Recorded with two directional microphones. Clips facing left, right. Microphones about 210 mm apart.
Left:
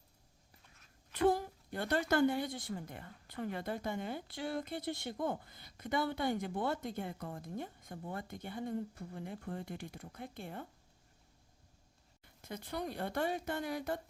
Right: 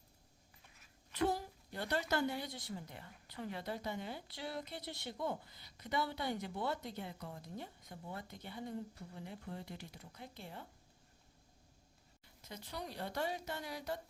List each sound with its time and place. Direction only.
1.1 s a woman's voice: 55° left (ahead or behind)
12.2 s a woman's voice: 55° left (ahead or behind)